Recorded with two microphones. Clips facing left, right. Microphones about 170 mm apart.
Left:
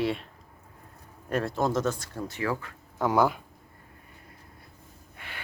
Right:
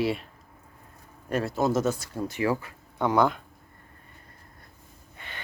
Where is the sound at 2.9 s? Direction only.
5° left (ahead or behind).